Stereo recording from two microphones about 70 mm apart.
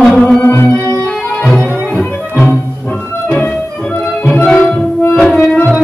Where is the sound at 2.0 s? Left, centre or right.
Left.